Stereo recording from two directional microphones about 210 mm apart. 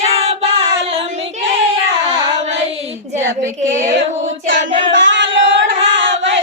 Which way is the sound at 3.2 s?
10° right (ahead or behind).